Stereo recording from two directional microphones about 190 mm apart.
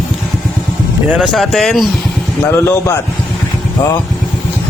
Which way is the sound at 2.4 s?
15° left (ahead or behind).